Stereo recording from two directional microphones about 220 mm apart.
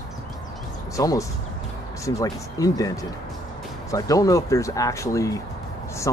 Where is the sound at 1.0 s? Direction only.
15° left (ahead or behind).